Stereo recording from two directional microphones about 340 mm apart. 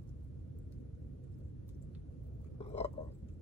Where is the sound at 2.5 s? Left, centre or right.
Centre.